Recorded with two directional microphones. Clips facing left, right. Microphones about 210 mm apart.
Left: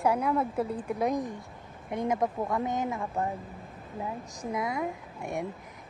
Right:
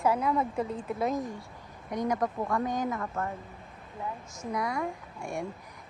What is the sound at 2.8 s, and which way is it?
Speech, 10° left (ahead or behind).